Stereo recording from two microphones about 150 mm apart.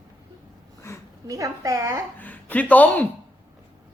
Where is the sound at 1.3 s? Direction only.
20° right (ahead or behind).